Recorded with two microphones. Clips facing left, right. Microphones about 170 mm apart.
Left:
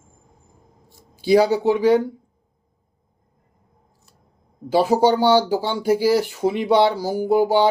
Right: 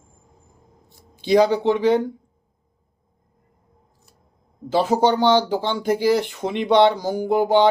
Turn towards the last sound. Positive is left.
turn(degrees=10)  # may be behind; listen again after turning